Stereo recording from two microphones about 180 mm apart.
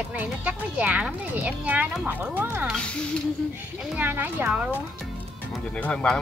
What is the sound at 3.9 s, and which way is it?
Speech, 10° right (ahead or behind).